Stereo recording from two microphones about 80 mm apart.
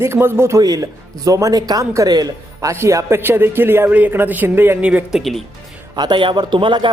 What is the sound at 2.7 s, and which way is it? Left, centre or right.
A man's voice, right.